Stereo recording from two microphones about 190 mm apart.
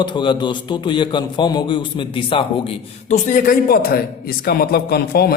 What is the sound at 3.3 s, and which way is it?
Speech, 45° left (ahead or behind).